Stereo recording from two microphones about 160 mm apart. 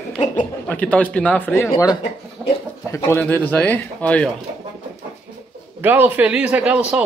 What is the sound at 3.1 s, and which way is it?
A man's voice, 15° left (ahead or behind).